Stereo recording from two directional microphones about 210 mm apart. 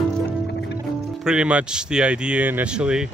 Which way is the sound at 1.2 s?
5° right (ahead or behind).